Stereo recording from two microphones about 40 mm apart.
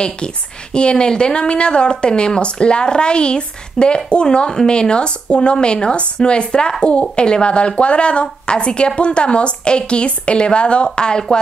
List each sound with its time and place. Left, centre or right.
0.7 s speech: left